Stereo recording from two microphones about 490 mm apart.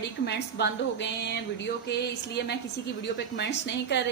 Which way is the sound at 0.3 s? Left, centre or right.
Left.